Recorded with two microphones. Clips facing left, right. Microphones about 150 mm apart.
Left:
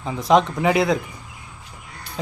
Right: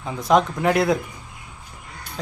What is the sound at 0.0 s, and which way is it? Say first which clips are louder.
Speech: left 1 dB; centre (ahead or behind).